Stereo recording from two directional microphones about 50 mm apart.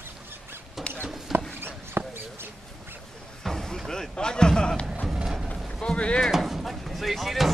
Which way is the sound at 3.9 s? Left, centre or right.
Centre.